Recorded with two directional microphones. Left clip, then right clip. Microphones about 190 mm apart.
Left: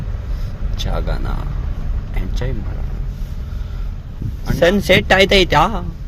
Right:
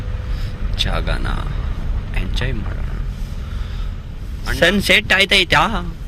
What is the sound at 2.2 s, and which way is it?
Speech, 15° left (ahead or behind).